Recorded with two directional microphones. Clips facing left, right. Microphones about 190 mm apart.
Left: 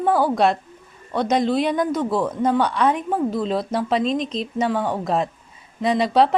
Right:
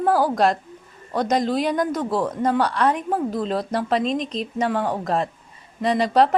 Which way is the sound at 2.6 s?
5° left (ahead or behind).